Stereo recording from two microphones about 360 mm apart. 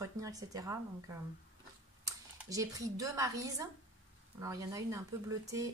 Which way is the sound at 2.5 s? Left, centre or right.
Centre.